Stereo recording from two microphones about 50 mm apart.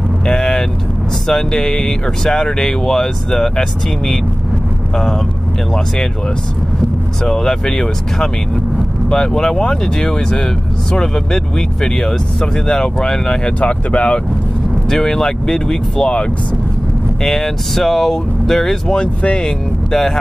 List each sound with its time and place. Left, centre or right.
0.3 s vehicle: centre
1.2 s speech: centre
7.2 s speech: centre
13.6 s speech: left
14.9 s speech: centre
17.2 s speech: centre
18.9 s speech: left